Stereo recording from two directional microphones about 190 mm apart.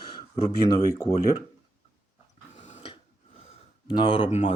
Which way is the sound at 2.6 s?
35° left (ahead or behind).